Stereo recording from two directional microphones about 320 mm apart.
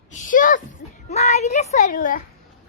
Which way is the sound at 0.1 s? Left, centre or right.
Left.